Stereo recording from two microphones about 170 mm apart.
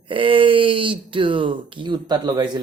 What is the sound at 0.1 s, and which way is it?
Speech, 30° right (ahead or behind).